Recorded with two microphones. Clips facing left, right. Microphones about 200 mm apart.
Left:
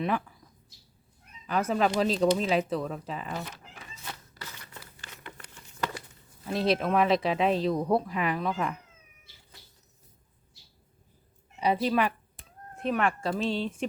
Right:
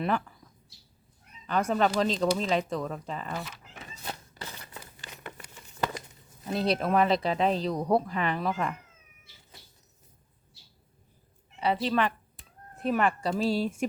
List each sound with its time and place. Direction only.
0.0 s speech: 5° left (ahead or behind)
1.5 s speech: 5° left (ahead or behind)
4.0 s a sound: 30° right (ahead or behind)
6.5 s speech: centre (ahead or behind)
11.6 s a woman's voice: 15° left (ahead or behind)
12.7 s speech: centre (ahead or behind)